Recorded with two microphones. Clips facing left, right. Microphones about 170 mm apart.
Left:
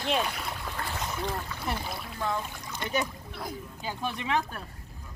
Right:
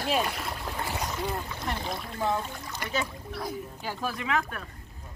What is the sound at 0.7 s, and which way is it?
Splash, 15° right (ahead or behind).